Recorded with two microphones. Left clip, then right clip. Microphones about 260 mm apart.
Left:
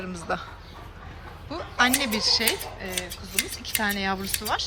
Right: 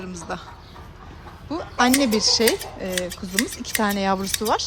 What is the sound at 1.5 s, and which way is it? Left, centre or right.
Speech, right.